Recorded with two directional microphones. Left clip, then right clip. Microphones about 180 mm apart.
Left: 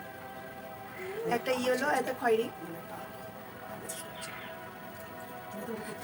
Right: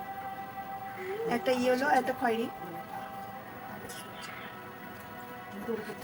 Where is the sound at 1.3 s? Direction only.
5° right (ahead or behind).